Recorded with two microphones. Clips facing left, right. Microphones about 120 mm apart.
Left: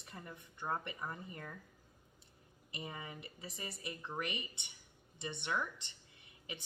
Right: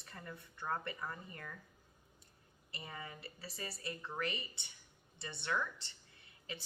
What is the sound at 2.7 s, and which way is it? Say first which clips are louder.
A woman's voice: left 2 dB; 20° left (ahead or behind).